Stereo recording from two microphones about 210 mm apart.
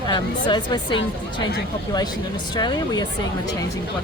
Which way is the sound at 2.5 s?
20° left (ahead or behind).